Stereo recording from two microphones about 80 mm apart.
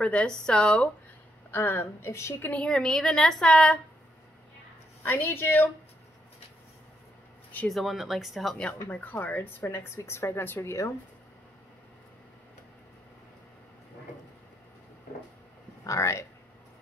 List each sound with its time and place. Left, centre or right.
0.0 s a woman's voice: centre
1.5 s speech: left
2.5 s a woman's voice: centre
5.0 s speech: left
7.6 s speech: centre
8.8 s speech: left
15.8 s speech: left